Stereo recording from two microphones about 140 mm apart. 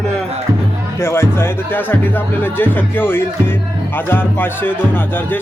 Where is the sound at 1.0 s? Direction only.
15° left (ahead or behind).